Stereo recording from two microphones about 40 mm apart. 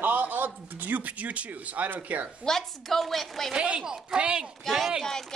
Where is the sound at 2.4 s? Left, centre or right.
Centre.